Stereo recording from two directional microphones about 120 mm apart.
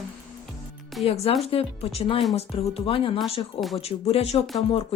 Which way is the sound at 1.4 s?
55° left (ahead or behind).